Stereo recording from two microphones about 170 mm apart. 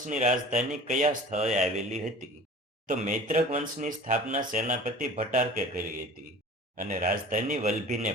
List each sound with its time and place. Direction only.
0.1 s speech: 45° right (ahead or behind)
1.5 s speech: centre (ahead or behind)
2.8 s speech: 45° right (ahead or behind)